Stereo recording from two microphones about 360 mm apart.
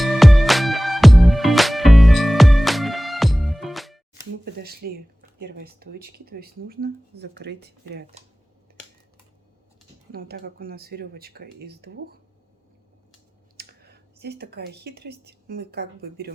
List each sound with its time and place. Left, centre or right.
0.0 s music: centre
4.4 s speech: right
10.1 s speech: right
13.6 s speech: right